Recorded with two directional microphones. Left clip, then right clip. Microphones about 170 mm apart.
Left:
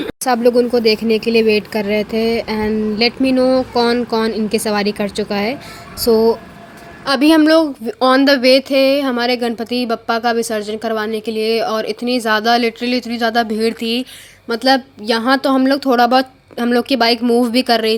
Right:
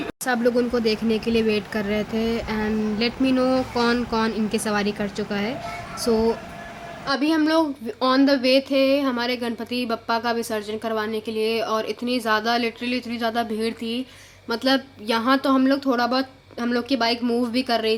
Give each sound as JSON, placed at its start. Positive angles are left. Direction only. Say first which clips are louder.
{"t": 0.0, "sound": "speech", "louder": "left 8 dB", "side_deg": 30}
{"t": 7.0, "sound": "speech", "louder": "left 10 dB", "side_deg": 55}